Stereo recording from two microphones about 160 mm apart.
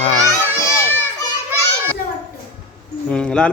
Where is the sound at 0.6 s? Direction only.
15° left (ahead or behind).